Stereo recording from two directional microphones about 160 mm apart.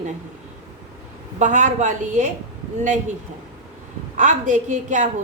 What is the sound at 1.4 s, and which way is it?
Speech, 50° right (ahead or behind).